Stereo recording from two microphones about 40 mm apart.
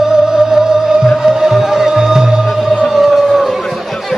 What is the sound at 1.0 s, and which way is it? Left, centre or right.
Music, centre.